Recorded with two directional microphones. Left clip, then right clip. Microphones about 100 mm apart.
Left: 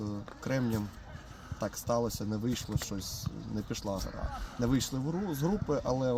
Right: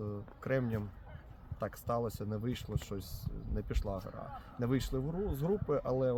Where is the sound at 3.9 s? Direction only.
55° right (ahead or behind).